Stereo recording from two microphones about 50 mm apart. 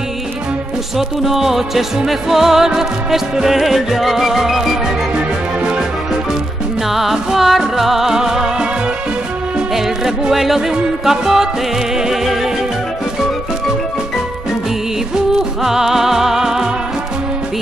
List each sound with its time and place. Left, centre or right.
0.9 s music: centre
5.6 s music: centre
6.9 s music: centre
9.8 s music: centre
15.1 s music: centre